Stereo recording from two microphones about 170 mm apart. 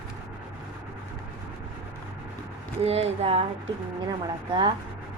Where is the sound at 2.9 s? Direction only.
40° right (ahead or behind).